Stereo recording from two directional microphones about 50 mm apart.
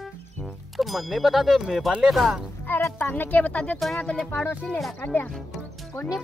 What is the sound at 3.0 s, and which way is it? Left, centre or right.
Speech, left.